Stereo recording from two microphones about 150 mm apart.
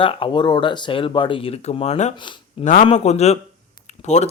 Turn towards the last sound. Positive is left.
turn(degrees=50)  # may be behind; listen again after turning